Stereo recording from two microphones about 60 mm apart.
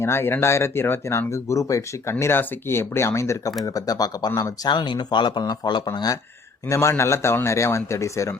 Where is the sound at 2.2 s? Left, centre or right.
Left.